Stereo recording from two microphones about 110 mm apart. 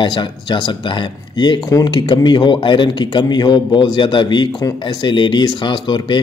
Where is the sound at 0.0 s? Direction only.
45° left (ahead or behind).